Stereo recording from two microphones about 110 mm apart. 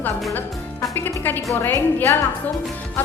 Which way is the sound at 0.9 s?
15° left (ahead or behind).